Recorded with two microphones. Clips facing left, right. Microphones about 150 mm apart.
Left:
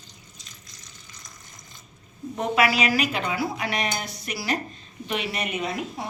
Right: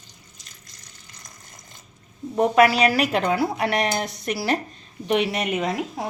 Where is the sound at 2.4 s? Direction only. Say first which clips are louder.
Right 6 dB; 40° right (ahead or behind).